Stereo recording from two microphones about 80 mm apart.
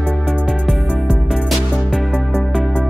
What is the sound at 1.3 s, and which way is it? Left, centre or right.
Music, centre.